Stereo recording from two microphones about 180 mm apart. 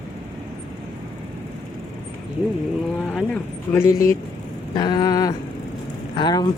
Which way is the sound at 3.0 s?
5° left (ahead or behind).